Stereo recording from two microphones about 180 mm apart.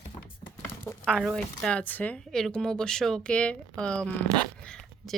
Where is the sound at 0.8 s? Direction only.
5° left (ahead or behind).